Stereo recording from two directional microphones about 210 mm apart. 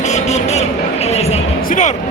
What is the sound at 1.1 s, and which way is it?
Music, 30° left (ahead or behind).